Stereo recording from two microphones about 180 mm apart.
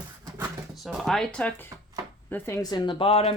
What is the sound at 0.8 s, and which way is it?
Speech, centre (ahead or behind).